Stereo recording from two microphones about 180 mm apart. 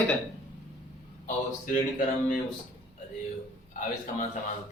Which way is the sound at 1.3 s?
45° left (ahead or behind).